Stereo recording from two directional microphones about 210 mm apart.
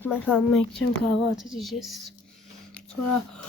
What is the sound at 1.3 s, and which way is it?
Speech, centre (ahead or behind).